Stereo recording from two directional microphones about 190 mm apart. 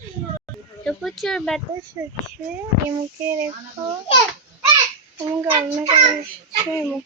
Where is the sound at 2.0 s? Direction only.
10° right (ahead or behind).